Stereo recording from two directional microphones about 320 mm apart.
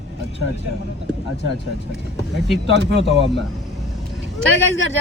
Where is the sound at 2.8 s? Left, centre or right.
Right.